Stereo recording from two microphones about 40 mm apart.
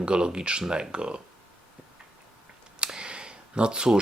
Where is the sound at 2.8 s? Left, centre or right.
Right.